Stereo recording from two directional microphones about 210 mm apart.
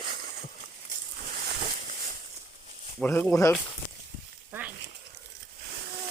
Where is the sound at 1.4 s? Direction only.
45° right (ahead or behind).